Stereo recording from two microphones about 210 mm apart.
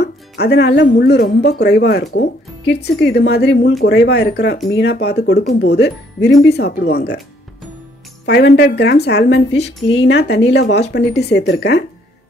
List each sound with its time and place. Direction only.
0.0 s speech: 50° left (ahead or behind)
8.3 s speech: 55° left (ahead or behind)